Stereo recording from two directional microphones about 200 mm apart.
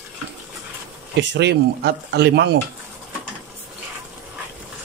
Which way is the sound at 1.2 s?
60° right (ahead or behind).